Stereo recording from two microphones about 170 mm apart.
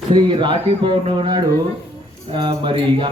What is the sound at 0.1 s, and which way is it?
Speech, 25° right (ahead or behind).